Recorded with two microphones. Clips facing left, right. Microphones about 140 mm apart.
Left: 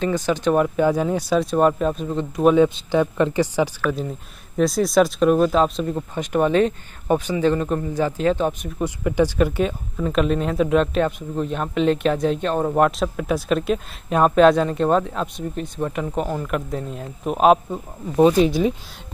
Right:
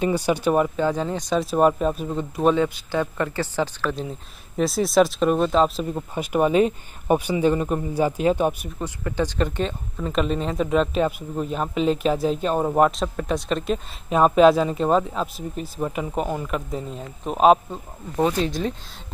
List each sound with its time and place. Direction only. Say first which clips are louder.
0.0 s speech: even; 10° right (ahead or behind)
0.7 s speech: left 4 dB; 10° left (ahead or behind); by 2.4 s 5° right (ahead or behind)
2.4 s speech: left 5 dB; 15° left (ahead or behind)
4.6 s speech: left 1 dB; centre (ahead or behind)
8.7 s speech: left 6 dB; 15° left (ahead or behind)
18.1 s speech: left 7 dB; 15° left (ahead or behind)